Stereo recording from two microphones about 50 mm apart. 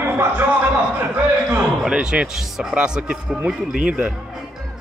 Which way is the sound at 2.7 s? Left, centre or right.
Centre.